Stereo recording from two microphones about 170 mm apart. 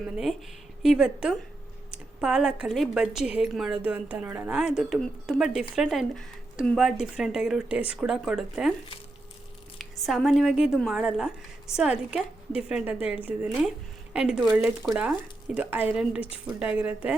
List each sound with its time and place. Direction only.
0.8 s a woman's voice: 5° right (ahead or behind)
9.7 s a woman's voice: centre (ahead or behind)